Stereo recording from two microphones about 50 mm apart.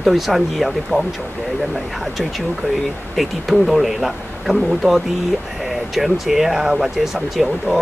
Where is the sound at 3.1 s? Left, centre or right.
Centre.